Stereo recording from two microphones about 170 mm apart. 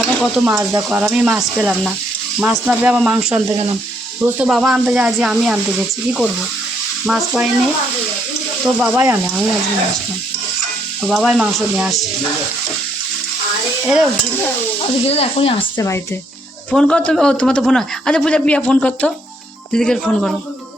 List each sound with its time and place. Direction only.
0.0 s sizzle: centre (ahead or behind)
0.4 s speech: 20° right (ahead or behind)
0.8 s speech: 5° right (ahead or behind)
8.6 s speech: centre (ahead or behind)
9.0 s speech: 15° right (ahead or behind)
11.0 s speech: centre (ahead or behind)
15.0 s speech: 35° left (ahead or behind)
16.7 s speech: 5° left (ahead or behind)